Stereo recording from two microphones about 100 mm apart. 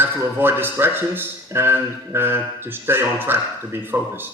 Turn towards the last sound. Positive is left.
turn(degrees=-20)  # may be behind; listen again after turning